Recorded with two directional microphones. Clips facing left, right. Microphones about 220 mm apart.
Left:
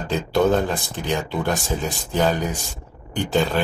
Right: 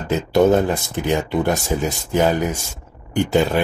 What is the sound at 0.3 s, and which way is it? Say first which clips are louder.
Speech: right 4 dB; 20° right (ahead or behind).